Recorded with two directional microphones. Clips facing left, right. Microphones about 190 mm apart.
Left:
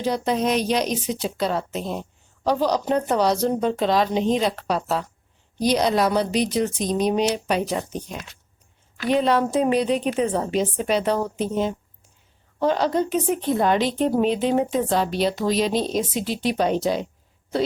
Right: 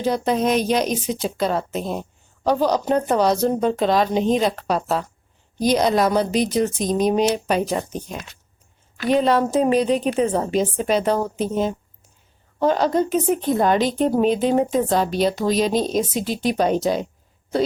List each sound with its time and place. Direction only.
0.0 s a woman's voice: 50° right (ahead or behind)